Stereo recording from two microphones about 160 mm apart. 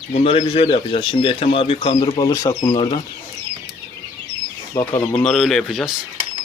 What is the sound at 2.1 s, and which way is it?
Speech, 20° left (ahead or behind).